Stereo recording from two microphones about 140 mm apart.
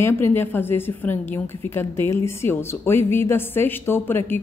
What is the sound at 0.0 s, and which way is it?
A woman's voice, 15° left (ahead or behind).